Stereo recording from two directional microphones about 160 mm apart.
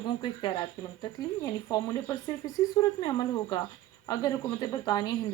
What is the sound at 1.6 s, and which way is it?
A woman's voice, 15° left (ahead or behind).